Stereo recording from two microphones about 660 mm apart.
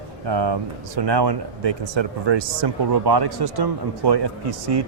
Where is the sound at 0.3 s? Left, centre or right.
Right.